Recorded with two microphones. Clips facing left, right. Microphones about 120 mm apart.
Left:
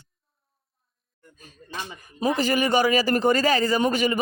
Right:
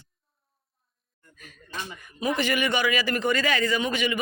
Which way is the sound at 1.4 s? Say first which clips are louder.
Left 2 dB; 35° left (ahead or behind).